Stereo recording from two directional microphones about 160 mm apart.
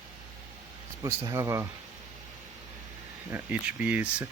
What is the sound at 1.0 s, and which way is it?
Speech, 20° right (ahead or behind).